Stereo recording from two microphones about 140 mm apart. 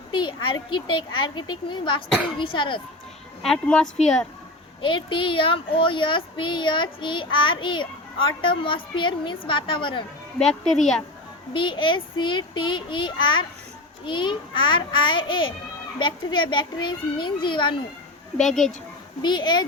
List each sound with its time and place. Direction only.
0.1 s speech: 35° left (ahead or behind)
3.4 s speech: 5° left (ahead or behind)
4.8 s speech: 35° left (ahead or behind)
10.3 s speech: 5° left (ahead or behind)
11.5 s speech: 35° left (ahead or behind)
18.3 s speech: 5° left (ahead or behind)
19.2 s speech: 30° left (ahead or behind)